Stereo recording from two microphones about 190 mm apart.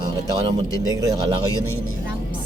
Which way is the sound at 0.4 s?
20° right (ahead or behind).